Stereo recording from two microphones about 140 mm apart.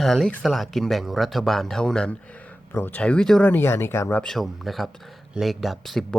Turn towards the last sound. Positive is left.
turn(degrees=0)  # may be behind; listen again after turning